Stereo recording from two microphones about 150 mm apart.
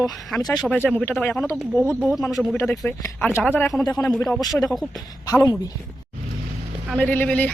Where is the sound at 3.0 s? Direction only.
15° left (ahead or behind).